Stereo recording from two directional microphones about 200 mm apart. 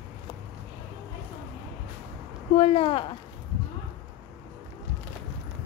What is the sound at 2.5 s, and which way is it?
Speech, 30° left (ahead or behind).